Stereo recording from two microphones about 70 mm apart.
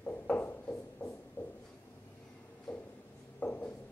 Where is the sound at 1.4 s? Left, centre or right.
Left.